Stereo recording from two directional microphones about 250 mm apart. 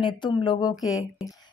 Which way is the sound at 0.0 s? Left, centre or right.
Centre.